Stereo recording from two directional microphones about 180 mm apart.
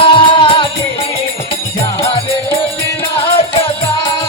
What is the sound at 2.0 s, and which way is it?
Music, 30° left (ahead or behind).